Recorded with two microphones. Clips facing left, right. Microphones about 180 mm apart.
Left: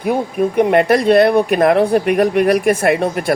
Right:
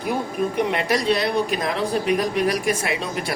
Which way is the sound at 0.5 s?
55° left (ahead or behind).